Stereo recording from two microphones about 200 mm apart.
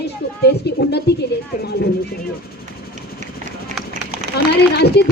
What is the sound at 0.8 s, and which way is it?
Speech, 55° left (ahead or behind).